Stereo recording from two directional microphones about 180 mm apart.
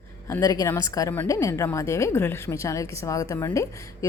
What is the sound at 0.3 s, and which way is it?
A woman's voice, 15° left (ahead or behind).